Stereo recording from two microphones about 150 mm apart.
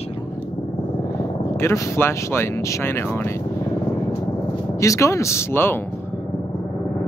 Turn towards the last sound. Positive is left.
turn(degrees=15)  # may be behind; listen again after turning